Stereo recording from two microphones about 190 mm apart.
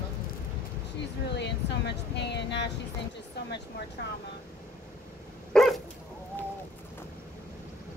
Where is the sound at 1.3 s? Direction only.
65° left (ahead or behind).